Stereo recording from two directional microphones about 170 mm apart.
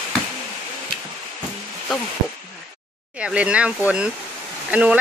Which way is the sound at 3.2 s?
5° right (ahead or behind).